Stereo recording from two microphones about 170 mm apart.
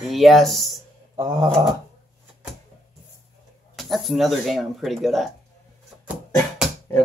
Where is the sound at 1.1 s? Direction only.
25° right (ahead or behind).